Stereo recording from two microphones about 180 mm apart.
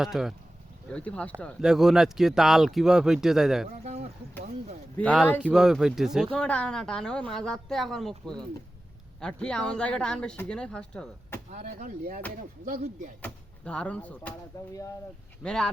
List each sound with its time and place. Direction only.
0.0 s speech: centre (ahead or behind)
3.8 s a sound: 35° right (ahead or behind)
4.9 s speech: 10° left (ahead or behind)
5.4 s speech: 5° right (ahead or behind)
9.2 s speech: 5° left (ahead or behind)
11.6 s speech: 45° right (ahead or behind)
13.2 s speech: 5° left (ahead or behind)
14.5 s speech: 20° left (ahead or behind)
15.4 s speech: 5° left (ahead or behind)